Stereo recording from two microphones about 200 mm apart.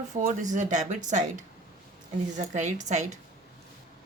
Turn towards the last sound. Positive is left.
turn(degrees=-35)  # may be behind; listen again after turning